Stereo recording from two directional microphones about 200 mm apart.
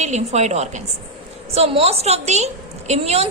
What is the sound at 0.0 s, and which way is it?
A woman's voice, 35° right (ahead or behind).